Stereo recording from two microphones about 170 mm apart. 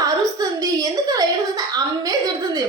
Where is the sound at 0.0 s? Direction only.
20° right (ahead or behind).